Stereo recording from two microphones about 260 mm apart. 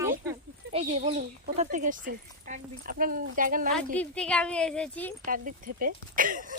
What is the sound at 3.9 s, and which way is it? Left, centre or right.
Speech, centre.